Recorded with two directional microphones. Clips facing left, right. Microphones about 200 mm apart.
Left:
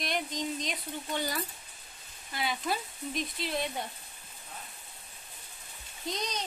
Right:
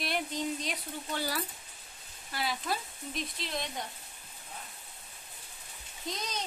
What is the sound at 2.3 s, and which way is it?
Speech, centre (ahead or behind).